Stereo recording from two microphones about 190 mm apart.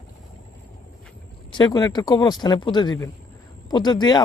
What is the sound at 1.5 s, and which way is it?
Speech, 20° left (ahead or behind).